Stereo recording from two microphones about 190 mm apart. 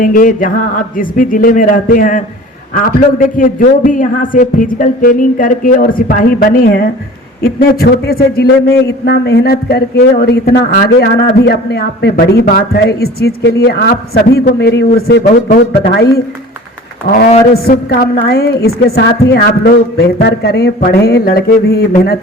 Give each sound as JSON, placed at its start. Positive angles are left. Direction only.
{"t": 0.0, "sound": "a man's voice", "side_deg": 45}